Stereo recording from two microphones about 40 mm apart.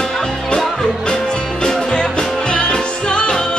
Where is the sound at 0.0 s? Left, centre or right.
Centre.